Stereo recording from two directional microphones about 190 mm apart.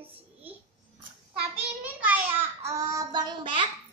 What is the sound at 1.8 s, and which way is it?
Child singing, 10° right (ahead or behind).